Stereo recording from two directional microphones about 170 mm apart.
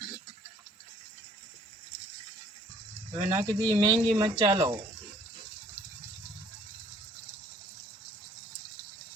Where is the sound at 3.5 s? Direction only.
20° right (ahead or behind).